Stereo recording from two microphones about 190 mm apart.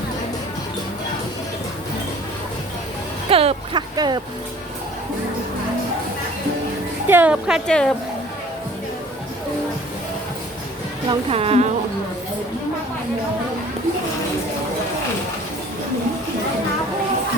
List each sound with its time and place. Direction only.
3.2 s speech: 30° right (ahead or behind)
7.1 s a woman's voice: 10° right (ahead or behind)
11.1 s a woman's voice: 30° right (ahead or behind)